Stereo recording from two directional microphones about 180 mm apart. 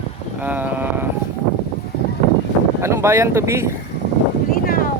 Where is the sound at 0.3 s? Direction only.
10° right (ahead or behind).